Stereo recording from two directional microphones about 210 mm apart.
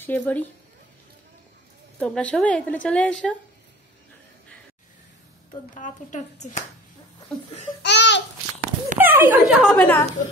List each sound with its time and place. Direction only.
0.0 s speech: 10° left (ahead or behind)
2.0 s a woman's voice: 5° left (ahead or behind)
5.8 s speech: 35° left (ahead or behind)
7.8 s babbling: 55° left (ahead or behind)
8.5 s a sound: 35° right (ahead or behind)
9.0 s speech: 10° right (ahead or behind)